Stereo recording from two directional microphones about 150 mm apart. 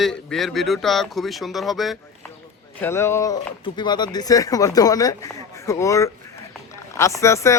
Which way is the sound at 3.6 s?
30° left (ahead or behind).